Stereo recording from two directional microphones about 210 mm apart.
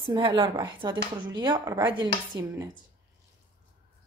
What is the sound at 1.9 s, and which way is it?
Dishes, 20° right (ahead or behind).